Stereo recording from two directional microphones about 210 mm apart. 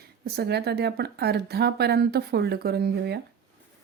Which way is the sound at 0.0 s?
50° right (ahead or behind).